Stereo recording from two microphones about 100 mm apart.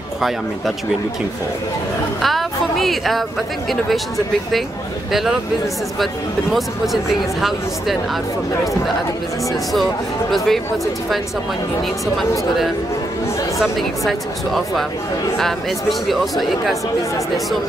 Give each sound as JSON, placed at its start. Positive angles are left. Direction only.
{"t": 2.2, "sound": "speech", "side_deg": 0}
{"t": 6.5, "sound": "speech", "side_deg": 0}
{"t": 13.6, "sound": "speech", "side_deg": 0}